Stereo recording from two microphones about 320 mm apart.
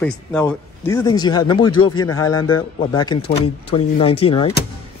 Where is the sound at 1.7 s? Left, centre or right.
Left.